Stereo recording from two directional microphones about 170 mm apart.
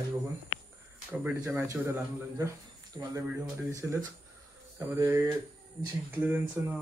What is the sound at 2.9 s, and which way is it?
Speech, 25° right (ahead or behind).